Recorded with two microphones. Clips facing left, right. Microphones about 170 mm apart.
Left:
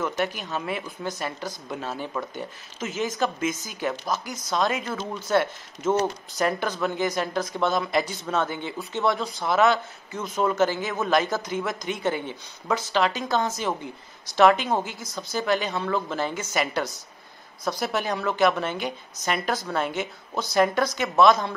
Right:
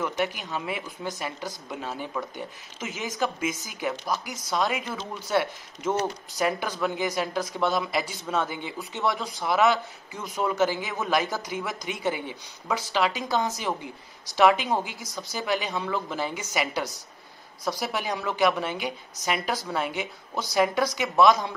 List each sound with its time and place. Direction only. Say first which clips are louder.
0.2 s a woman's voice: left 1 dB; 15° right (ahead or behind)
3.9 s speech: left 1 dB; 15° left (ahead or behind)
4.5 s a woman's voice: left 2 dB; 10° right (ahead or behind)